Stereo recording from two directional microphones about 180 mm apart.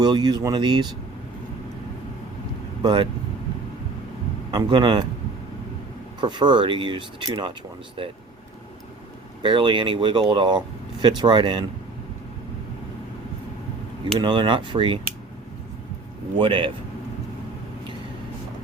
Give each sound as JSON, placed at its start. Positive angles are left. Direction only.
{"t": 0.0, "sound": "speech", "side_deg": -25}
{"t": 2.8, "sound": "speech", "side_deg": -25}
{"t": 4.5, "sound": "speech", "side_deg": -25}
{"t": 6.1, "sound": "speech", "side_deg": -25}
{"t": 9.4, "sound": "speech", "side_deg": -25}
{"t": 14.0, "sound": "speech", "side_deg": -25}
{"t": 16.4, "sound": "speech", "side_deg": -25}